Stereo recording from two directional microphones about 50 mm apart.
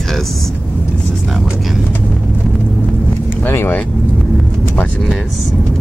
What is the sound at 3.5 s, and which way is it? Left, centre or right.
Speech, left.